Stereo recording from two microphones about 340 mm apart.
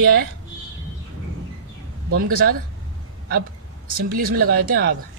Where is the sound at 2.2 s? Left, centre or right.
Right.